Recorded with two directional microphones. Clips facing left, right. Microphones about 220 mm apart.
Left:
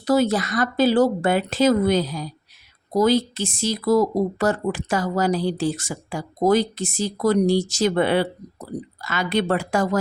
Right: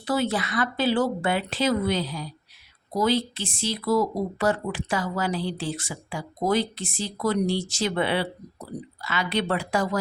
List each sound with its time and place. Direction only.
0.0 s speech: 40° left (ahead or behind)